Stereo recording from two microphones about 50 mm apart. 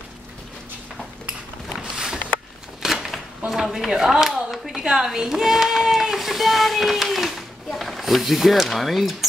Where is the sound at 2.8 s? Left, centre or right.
Centre.